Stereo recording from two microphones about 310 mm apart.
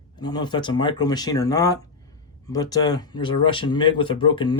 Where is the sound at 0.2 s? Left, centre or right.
Centre.